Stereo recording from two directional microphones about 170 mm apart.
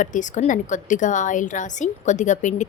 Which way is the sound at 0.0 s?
45° left (ahead or behind).